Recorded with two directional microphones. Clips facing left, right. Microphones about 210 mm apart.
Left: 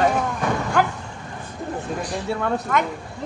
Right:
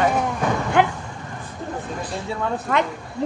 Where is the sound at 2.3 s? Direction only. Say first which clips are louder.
Left 2 dB; 65° left (ahead or behind).